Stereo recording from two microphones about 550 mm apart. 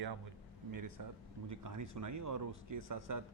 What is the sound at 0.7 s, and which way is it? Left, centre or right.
A man's voice, right.